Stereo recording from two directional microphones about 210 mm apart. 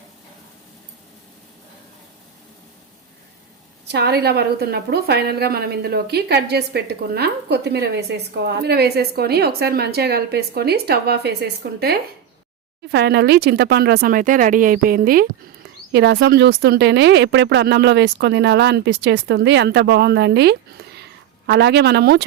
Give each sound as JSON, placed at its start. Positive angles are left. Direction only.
{"t": 3.8, "sound": "speech", "side_deg": -50}